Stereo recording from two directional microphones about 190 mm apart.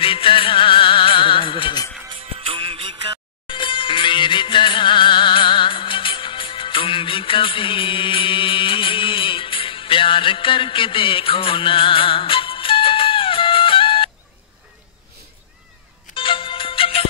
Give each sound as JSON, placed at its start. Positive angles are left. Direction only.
{"t": 0.0, "sound": "music", "side_deg": 30}
{"t": 2.0, "sound": "music", "side_deg": -30}
{"t": 3.4, "sound": "music", "side_deg": 25}
{"t": 16.2, "sound": "music", "side_deg": 25}